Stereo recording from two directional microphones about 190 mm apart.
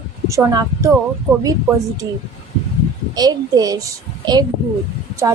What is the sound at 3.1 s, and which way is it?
A child's voice, 20° right (ahead or behind).